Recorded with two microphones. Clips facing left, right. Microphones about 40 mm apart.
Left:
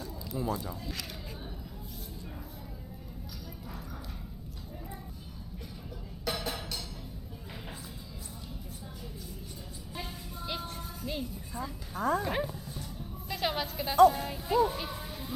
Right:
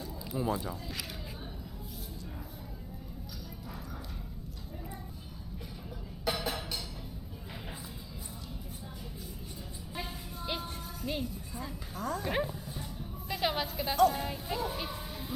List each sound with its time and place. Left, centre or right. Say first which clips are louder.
0.0 s speech: right 1 dB; centre
6.2 s music: right 1 dB; centre
9.9 s vehicle: right 1 dB; centre
10.8 s music: right 1 dB; centre
11.9 s speech: left 6 dB; centre
12.2 s music: even; centre